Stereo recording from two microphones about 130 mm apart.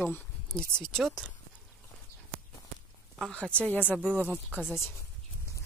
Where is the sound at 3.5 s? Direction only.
10° left (ahead or behind).